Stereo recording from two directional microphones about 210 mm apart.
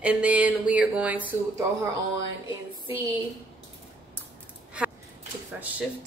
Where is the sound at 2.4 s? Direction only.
25° left (ahead or behind).